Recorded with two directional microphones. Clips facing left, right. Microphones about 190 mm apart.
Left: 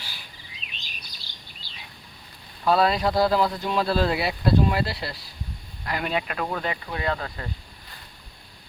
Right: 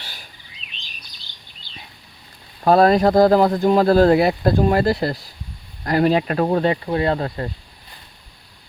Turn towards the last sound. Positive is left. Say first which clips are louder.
# right 8 dB
turn(degrees=-40)  # may be behind; listen again after turning